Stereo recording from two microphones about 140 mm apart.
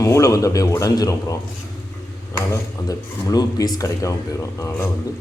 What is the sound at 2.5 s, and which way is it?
Speech, 25° left (ahead or behind).